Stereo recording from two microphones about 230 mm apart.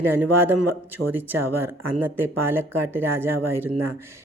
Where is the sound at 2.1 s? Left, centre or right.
Centre.